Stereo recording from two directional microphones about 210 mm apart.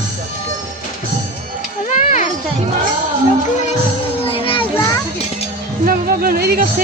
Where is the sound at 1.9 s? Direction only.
35° left (ahead or behind).